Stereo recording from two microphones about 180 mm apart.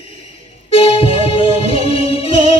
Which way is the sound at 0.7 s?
30° left (ahead or behind).